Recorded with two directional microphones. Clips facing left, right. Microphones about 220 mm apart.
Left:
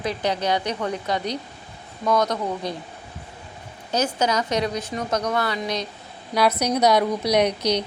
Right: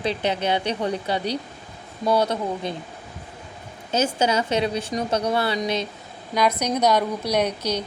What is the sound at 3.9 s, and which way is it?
A woman's voice, 25° right (ahead or behind).